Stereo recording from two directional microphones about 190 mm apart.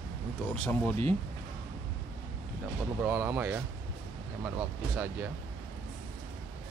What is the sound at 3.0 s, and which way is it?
Speech, 10° right (ahead or behind).